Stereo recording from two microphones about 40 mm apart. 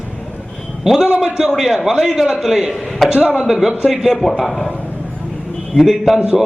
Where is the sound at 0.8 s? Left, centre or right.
Centre.